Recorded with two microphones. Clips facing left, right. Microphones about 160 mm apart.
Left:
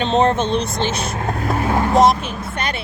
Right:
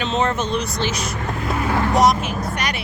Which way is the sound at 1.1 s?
45° left (ahead or behind).